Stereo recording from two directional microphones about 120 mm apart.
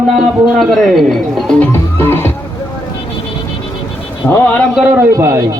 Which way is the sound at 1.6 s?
20° left (ahead or behind).